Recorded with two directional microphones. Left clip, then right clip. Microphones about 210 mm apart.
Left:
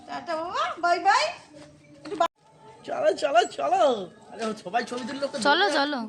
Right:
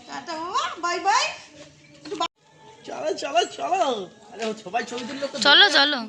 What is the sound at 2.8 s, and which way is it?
Speech, 10° left (ahead or behind).